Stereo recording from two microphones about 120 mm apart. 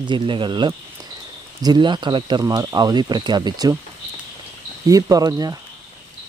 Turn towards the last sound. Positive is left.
turn(degrees=-30)  # may be behind; listen again after turning